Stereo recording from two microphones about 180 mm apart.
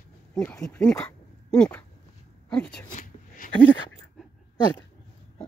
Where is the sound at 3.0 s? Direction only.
50° left (ahead or behind).